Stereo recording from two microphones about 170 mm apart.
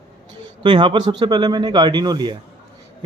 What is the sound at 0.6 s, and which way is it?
A man's voice, 30° right (ahead or behind).